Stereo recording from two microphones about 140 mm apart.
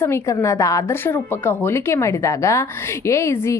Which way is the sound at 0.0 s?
20° left (ahead or behind).